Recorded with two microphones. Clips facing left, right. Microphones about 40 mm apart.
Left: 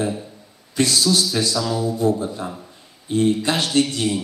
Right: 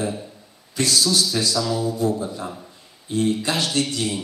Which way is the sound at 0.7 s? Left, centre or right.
Left.